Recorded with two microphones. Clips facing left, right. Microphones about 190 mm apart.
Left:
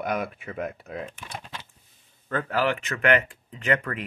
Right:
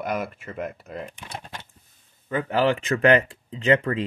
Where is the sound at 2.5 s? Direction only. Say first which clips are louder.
Right 5 dB; 30° right (ahead or behind).